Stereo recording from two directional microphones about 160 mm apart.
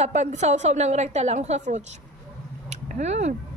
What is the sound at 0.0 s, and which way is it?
A woman's voice, 45° right (ahead or behind).